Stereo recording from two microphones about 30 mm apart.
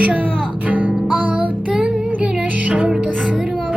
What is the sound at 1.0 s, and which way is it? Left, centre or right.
Music, right.